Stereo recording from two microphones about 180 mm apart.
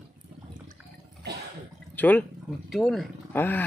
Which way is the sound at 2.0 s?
10° left (ahead or behind).